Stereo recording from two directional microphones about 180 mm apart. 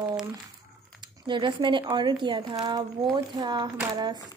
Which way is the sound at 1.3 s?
25° right (ahead or behind).